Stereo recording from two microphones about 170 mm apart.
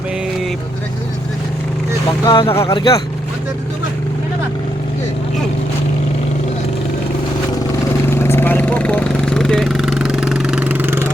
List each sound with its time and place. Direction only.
2.2 s speech: 30° left (ahead or behind)
2.6 s speech: 20° left (ahead or behind)
8.0 s a sound: 15° left (ahead or behind); by 11.1 s 15° right (ahead or behind)